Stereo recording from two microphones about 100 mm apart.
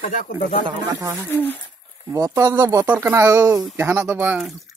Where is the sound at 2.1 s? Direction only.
35° right (ahead or behind).